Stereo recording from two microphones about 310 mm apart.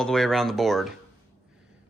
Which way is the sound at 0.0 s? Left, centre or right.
Centre.